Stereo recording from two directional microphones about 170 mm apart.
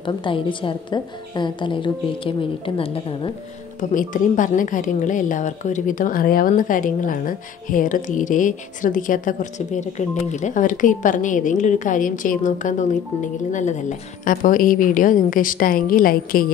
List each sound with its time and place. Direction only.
0.0 s a woman's voice: 30° left (ahead or behind)
3.9 s a woman's voice: 50° left (ahead or behind)